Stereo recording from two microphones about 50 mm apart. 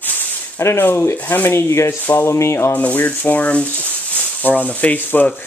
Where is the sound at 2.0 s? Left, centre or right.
Left.